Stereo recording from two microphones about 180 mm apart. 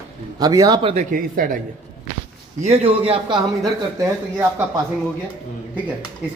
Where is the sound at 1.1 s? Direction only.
50° right (ahead or behind).